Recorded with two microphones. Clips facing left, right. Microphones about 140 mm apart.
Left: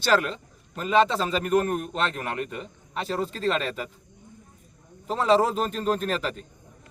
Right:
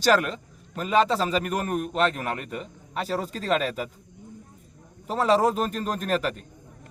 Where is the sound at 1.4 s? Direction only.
35° left (ahead or behind).